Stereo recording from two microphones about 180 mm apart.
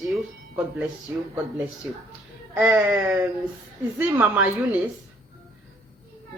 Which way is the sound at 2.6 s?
10° right (ahead or behind).